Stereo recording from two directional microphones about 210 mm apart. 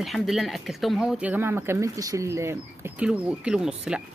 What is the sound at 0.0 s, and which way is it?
Speech, centre (ahead or behind).